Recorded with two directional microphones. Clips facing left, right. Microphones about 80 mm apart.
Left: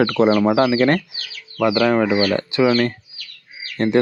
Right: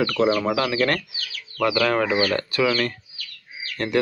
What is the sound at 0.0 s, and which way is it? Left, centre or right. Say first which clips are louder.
Speech: left 5 dB; left.